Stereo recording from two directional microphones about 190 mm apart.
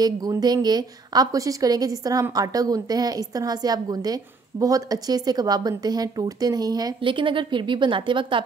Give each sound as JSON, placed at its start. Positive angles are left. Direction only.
{"t": 0.0, "sound": "a woman's voice", "side_deg": -20}